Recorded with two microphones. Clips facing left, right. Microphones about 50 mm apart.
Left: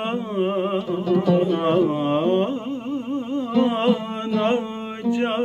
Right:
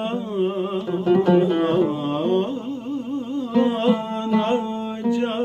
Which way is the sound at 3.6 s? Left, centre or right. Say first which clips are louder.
Even; left.